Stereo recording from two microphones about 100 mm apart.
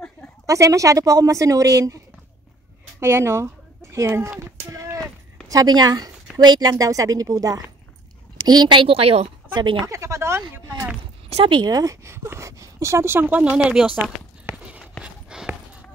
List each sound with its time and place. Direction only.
0.5 s a woman's voice: 30° right (ahead or behind)
3.0 s speech: 25° right (ahead or behind)
4.4 s a sound: 30° right (ahead or behind)
5.5 s a woman's voice: 40° right (ahead or behind)
8.8 s a woman's voice: 75° right (ahead or behind)
9.6 s speech: 50° right (ahead or behind)
9.8 s a sound: 30° right (ahead or behind)
11.2 s a sound: 90° right
11.5 s speech: 40° right (ahead or behind); by 13.9 s 10° right (ahead or behind)
15.0 s clip-clop: 10° right (ahead or behind)